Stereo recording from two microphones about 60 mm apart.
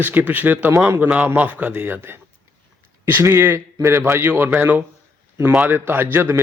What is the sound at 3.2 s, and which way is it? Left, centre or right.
A man's voice, right.